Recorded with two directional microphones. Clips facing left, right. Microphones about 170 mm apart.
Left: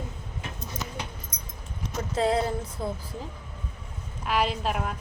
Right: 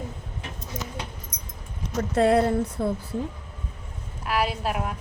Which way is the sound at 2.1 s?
65° right (ahead or behind).